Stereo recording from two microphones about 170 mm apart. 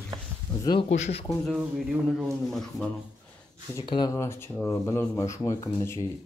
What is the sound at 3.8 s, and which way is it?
Speech, 30° left (ahead or behind).